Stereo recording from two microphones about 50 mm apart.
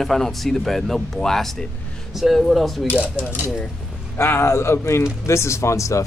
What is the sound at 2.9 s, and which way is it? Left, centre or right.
Speech, right.